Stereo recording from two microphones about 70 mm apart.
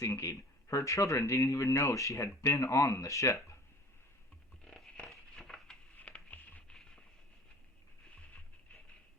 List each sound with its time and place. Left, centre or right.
0.0 s speech: left
4.6 s a sound: centre
6.0 s patter: left